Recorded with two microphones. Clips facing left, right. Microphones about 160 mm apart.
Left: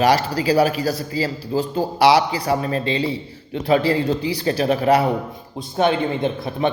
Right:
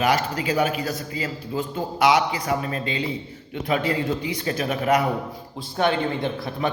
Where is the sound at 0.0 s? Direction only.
35° left (ahead or behind).